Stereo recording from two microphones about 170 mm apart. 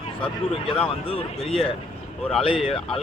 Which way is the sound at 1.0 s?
35° left (ahead or behind).